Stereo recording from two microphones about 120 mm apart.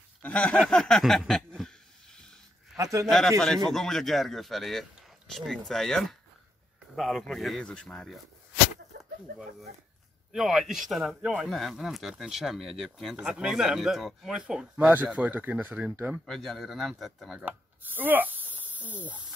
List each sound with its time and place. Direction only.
0.2 s a sound: 10° left (ahead or behind)
2.8 s speech: 30° right (ahead or behind)
3.1 s speech: centre (ahead or behind)
10.3 s speech: 5° right (ahead or behind)
16.3 s speech: centre (ahead or behind)
17.5 s speech: 15° right (ahead or behind)
18.5 s a sound: 15° right (ahead or behind)